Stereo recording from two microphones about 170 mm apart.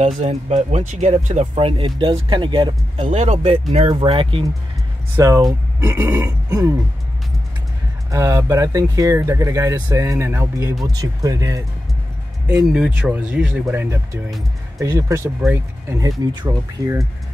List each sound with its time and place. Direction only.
0.0 s speech: 40° right (ahead or behind)
1.5 s speech: 30° right (ahead or behind)
5.1 s speech: 20° right (ahead or behind)
8.1 s speech: 20° right (ahead or behind)
12.4 s speech: 5° right (ahead or behind)